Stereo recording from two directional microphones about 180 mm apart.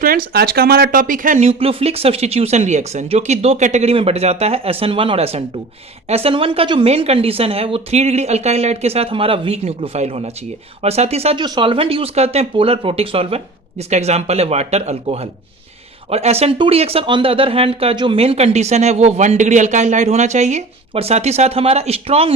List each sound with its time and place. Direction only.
0.0 s speech: 55° right (ahead or behind)
1.5 s speech: 35° right (ahead or behind)